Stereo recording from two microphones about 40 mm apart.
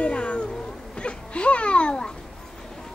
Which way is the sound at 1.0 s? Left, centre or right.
Left.